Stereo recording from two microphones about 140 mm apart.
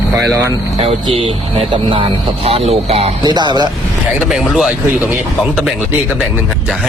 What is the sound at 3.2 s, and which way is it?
Speech, 30° right (ahead or behind).